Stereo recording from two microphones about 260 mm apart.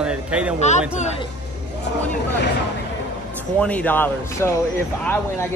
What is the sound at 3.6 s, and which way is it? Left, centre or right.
Speech, centre.